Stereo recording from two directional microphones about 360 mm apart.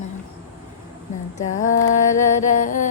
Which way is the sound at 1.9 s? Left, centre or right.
Left.